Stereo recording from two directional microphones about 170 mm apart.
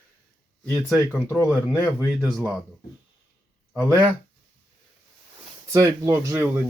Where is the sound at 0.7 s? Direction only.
5° right (ahead or behind).